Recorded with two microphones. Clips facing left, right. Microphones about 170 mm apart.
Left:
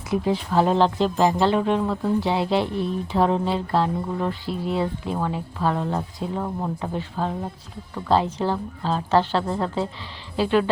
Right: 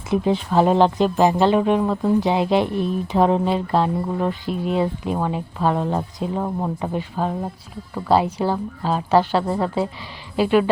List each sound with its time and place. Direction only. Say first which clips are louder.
0.1 s speech: right 3 dB; 20° right (ahead or behind)